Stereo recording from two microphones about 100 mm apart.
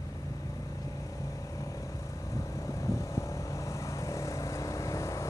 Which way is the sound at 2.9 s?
30° left (ahead or behind).